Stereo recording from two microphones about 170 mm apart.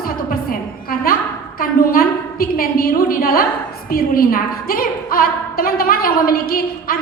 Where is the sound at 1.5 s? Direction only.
60° left (ahead or behind).